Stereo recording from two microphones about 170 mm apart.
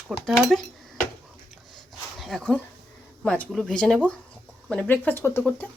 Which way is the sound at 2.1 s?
Centre (ahead or behind).